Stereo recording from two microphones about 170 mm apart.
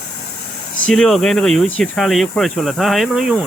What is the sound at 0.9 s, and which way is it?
Speech, centre (ahead or behind).